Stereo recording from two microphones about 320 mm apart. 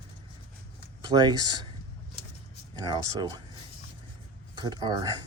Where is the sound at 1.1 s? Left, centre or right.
Centre.